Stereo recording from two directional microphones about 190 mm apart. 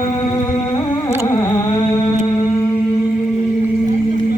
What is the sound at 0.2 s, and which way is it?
Music, 20° left (ahead or behind).